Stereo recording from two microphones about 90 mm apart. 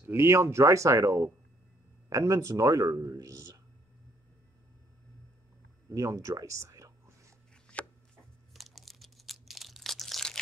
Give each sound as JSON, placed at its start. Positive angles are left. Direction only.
{"t": 0.0, "sound": "speech", "side_deg": -30}
{"t": 5.9, "sound": "a sound", "side_deg": -35}
{"t": 7.7, "sound": "chopping", "side_deg": 15}
{"t": 8.5, "sound": "crumpling", "side_deg": 0}